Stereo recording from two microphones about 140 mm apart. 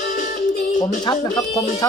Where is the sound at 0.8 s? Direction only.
30° left (ahead or behind).